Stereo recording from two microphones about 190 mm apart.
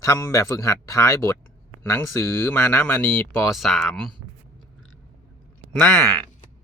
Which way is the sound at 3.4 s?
Centre (ahead or behind).